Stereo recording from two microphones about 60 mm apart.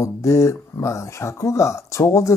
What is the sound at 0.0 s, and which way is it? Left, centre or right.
Speech, left.